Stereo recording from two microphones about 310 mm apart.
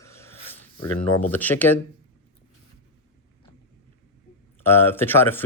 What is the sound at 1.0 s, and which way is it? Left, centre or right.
Speech, centre.